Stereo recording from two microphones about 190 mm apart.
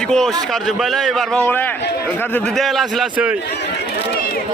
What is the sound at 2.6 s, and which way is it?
Speech, centre (ahead or behind).